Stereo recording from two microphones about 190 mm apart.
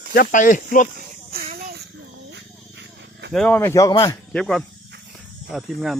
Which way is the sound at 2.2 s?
65° right (ahead or behind).